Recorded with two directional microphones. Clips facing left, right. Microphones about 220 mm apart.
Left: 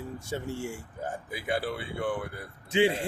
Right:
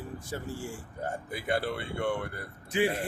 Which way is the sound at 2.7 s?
25° left (ahead or behind).